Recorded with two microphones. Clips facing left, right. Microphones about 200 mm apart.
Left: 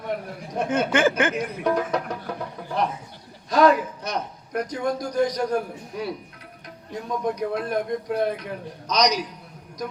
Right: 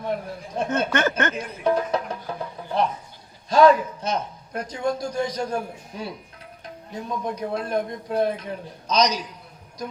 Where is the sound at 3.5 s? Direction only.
25° right (ahead or behind).